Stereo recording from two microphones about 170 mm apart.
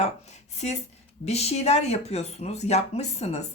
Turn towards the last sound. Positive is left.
turn(degrees=40)  # may be behind; listen again after turning